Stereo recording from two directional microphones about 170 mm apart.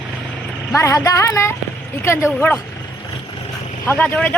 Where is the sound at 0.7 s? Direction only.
15° left (ahead or behind).